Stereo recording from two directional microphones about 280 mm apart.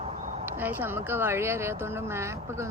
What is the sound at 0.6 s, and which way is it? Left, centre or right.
Speech, centre.